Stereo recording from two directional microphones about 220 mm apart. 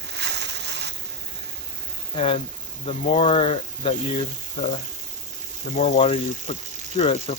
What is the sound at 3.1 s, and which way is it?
Speech, 25° left (ahead or behind).